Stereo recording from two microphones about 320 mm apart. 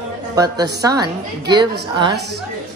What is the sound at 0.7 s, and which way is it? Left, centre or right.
Speech, centre.